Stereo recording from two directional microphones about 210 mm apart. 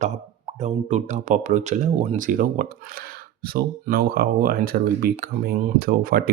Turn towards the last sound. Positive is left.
turn(degrees=-45)  # may be behind; listen again after turning